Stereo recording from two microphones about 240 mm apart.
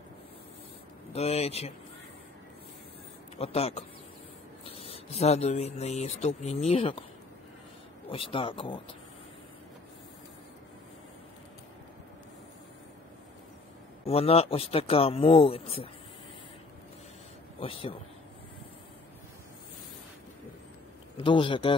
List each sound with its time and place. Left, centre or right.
1.1 s speech: left
3.3 s speech: left
8.1 s speech: left
14.0 s speech: left
17.6 s speech: left
21.2 s speech: left